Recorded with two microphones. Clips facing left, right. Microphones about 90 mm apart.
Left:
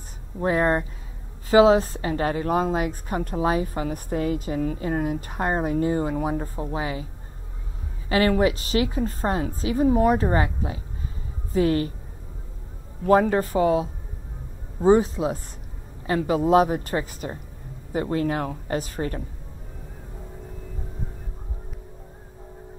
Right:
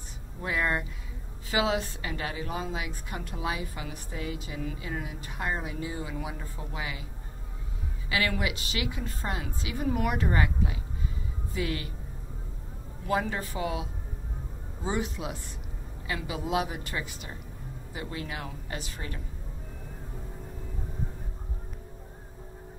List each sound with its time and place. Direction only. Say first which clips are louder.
0.4 s a woman's voice: left 8 dB; 40° left (ahead or behind)
8.1 s a woman's voice: left 10 dB; 40° left (ahead or behind)
13.0 s a woman's voice: left 11 dB; 45° left (ahead or behind)